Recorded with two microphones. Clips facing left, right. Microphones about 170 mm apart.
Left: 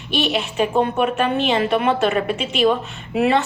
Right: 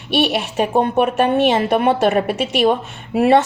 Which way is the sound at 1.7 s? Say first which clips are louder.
Right 3 dB; 45° right (ahead or behind).